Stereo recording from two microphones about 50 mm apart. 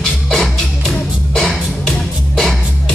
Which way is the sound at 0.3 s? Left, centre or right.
Centre.